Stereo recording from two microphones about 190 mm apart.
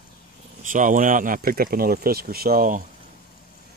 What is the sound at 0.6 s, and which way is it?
Speech, 45° right (ahead or behind).